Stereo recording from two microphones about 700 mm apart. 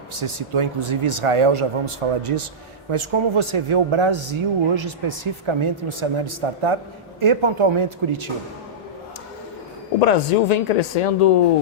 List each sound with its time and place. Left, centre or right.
0.2 s speech: right
10.0 s speech: left